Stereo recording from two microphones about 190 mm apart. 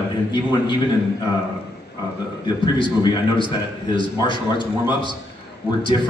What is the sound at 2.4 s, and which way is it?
A man's voice, 25° left (ahead or behind).